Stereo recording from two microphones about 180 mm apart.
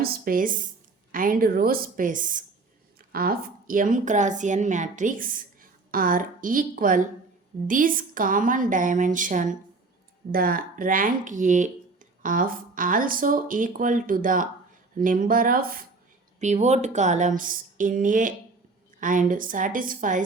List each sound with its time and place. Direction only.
0.0 s a woman's voice: 55° right (ahead or behind)
16.4 s a woman's voice: 40° right (ahead or behind)